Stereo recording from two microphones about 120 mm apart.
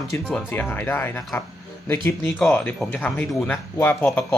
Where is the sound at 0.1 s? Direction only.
15° left (ahead or behind).